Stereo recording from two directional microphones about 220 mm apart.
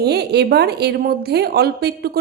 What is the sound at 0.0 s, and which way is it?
A woman's voice, 50° right (ahead or behind).